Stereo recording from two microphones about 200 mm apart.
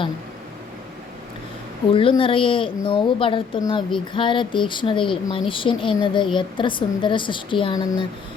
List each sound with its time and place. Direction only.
1.9 s a woman's voice: 25° left (ahead or behind)